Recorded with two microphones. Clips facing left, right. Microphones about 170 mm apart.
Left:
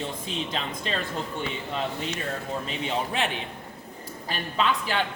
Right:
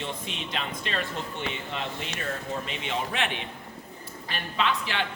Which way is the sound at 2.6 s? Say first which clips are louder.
Left 2 dB; 35° left (ahead or behind).